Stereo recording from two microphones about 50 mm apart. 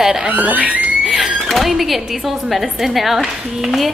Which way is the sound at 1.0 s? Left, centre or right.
Centre.